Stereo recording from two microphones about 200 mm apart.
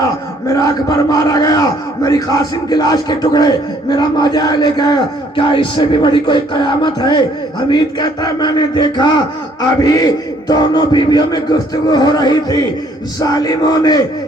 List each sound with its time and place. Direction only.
0.4 s battle cry: 15° left (ahead or behind)
2.0 s speech: 20° left (ahead or behind)